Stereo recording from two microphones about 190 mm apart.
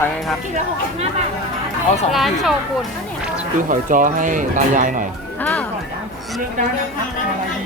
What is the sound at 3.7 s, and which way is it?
Speech, 45° right (ahead or behind).